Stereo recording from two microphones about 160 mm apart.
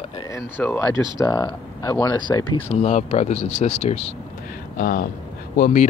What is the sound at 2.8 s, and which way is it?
Speech, 40° left (ahead or behind).